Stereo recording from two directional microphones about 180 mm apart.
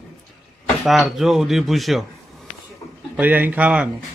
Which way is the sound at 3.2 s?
10° right (ahead or behind).